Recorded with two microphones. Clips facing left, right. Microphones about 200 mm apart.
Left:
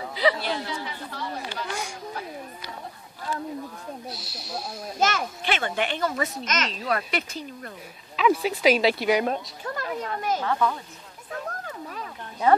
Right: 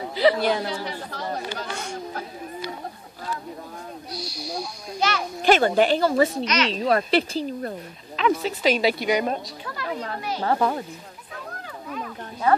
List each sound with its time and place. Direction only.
0.1 s chatter: 35° right (ahead or behind)
0.4 s speech: 45° right (ahead or behind)
4.1 s snake: centre (ahead or behind)
5.0 s a child's voice: 50° left (ahead or behind)
5.4 s a woman's voice: 40° right (ahead or behind)
6.4 s a child's voice: 45° left (ahead or behind)
6.9 s a woman's voice: 30° right (ahead or behind)
8.2 s speech: 10° left (ahead or behind)
9.8 s a child's voice: 45° left (ahead or behind)
10.4 s a woman's voice: 40° right (ahead or behind)